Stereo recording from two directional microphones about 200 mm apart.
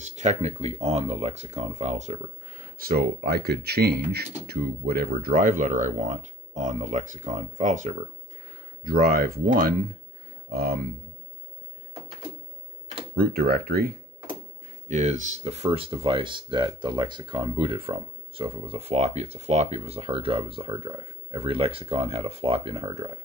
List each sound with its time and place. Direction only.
0.0 s speech: 35° right (ahead or behind)
13.1 s speech: 50° right (ahead or behind)
14.9 s speech: 35° right (ahead or behind)